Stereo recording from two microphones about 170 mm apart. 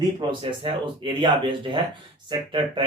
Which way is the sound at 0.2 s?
30° right (ahead or behind).